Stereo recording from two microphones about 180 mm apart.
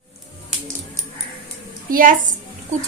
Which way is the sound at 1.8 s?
50° right (ahead or behind).